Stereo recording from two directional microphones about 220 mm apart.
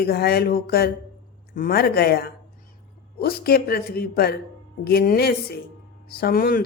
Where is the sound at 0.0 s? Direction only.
45° left (ahead or behind).